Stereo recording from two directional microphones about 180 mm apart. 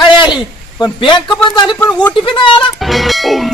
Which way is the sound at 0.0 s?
25° left (ahead or behind).